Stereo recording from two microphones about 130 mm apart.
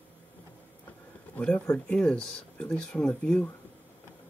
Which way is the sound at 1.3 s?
10° left (ahead or behind).